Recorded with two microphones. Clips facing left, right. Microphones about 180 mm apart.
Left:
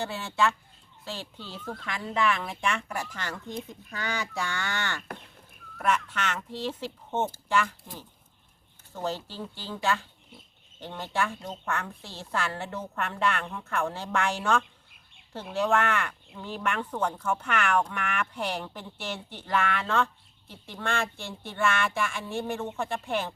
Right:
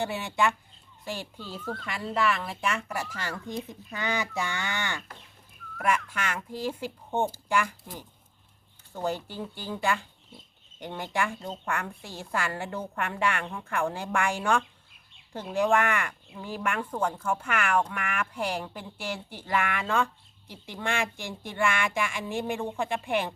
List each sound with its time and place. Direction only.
0.0 s speech: 15° right (ahead or behind)
3.9 s speech: 20° right (ahead or behind)
9.0 s speech: 15° right (ahead or behind)